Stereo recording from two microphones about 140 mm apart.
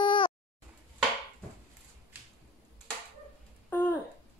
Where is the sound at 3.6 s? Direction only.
10° left (ahead or behind).